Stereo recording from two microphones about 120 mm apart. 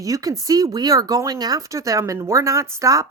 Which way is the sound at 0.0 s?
30° right (ahead or behind).